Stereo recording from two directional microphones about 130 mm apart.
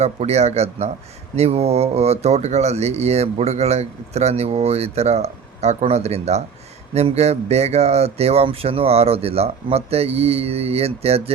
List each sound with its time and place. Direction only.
0.0 s speech: 55° right (ahead or behind)